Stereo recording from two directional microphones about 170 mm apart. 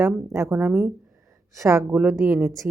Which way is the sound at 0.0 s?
15° right (ahead or behind).